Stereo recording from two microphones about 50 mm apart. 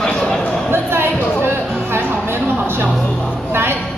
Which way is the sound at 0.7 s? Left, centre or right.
Right.